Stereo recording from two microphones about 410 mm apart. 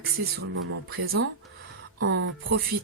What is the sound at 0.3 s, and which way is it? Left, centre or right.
Speech, right.